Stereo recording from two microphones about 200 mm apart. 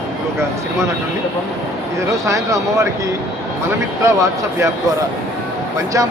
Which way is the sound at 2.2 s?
15° right (ahead or behind).